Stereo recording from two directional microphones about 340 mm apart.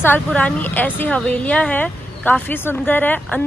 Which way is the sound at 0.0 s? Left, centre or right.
Centre.